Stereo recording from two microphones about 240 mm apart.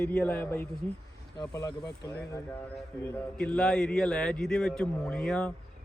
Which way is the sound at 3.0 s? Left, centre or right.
Centre.